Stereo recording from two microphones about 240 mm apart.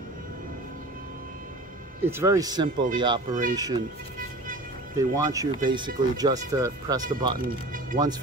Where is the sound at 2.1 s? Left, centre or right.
Centre.